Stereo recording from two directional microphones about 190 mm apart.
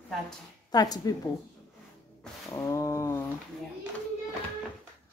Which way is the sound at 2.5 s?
15° left (ahead or behind).